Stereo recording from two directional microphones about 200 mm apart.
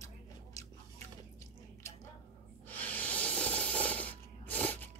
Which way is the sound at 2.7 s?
10° left (ahead or behind).